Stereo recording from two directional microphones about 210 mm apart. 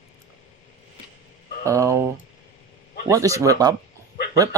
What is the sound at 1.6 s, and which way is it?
Speech, 15° right (ahead or behind).